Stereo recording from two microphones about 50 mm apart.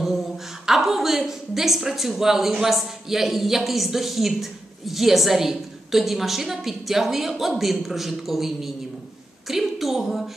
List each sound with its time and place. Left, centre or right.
0.7 s a woman's voice: centre